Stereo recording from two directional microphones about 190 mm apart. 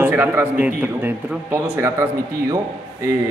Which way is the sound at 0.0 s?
10° right (ahead or behind).